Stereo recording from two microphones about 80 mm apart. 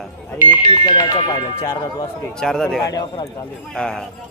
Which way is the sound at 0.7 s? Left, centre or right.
Left.